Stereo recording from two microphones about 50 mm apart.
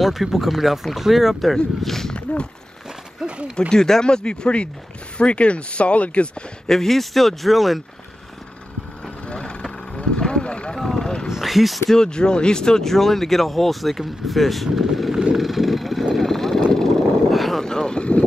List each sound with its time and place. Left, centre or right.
0.0 s speech: centre
3.2 s speech: centre
3.5 s speech: centre
6.7 s speech: centre
9.3 s vehicle: left
10.8 s vehicle: centre
11.2 s a sound: centre
11.9 s speech: centre
15.3 s vehicle: centre
17.6 s vehicle: centre